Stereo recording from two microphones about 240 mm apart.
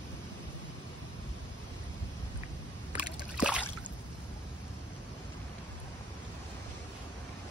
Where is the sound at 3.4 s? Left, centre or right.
Centre.